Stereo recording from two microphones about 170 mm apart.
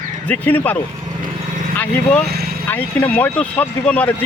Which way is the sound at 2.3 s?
70° right (ahead or behind).